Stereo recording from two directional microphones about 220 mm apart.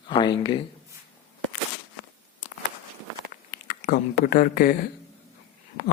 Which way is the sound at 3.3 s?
40° left (ahead or behind).